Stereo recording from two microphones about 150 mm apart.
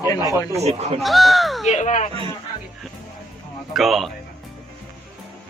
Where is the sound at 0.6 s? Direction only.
45° right (ahead or behind).